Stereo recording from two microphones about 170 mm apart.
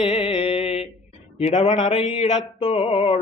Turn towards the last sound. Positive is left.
turn(degrees=35)  # may be behind; listen again after turning